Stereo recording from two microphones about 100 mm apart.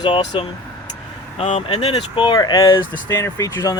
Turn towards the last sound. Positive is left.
turn(degrees=35)  # may be behind; listen again after turning